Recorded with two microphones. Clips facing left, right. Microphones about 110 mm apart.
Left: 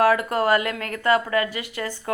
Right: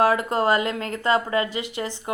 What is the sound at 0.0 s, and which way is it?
A woman's voice, 25° right (ahead or behind).